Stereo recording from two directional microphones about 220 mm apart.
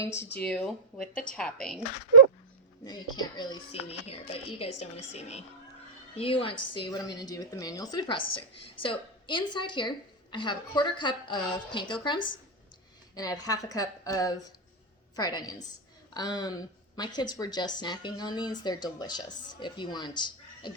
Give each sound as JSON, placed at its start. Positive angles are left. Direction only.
{"t": 0.2, "sound": "speech", "side_deg": 50}
{"t": 0.4, "sound": "speech", "side_deg": 5}
{"t": 1.1, "sound": "a woman's voice", "side_deg": 40}
{"t": 1.4, "sound": "speech", "side_deg": 5}
{"t": 2.8, "sound": "a woman's voice", "side_deg": 20}